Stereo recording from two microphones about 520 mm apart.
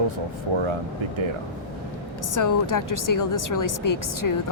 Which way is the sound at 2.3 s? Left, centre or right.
Left.